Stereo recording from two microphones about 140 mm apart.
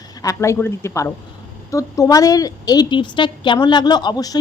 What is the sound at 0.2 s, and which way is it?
A woman's voice, 20° left (ahead or behind).